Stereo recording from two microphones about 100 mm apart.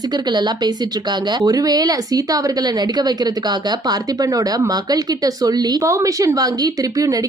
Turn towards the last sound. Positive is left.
turn(degrees=-35)  # may be behind; listen again after turning